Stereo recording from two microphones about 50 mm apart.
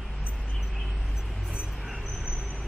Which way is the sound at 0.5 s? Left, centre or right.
Centre.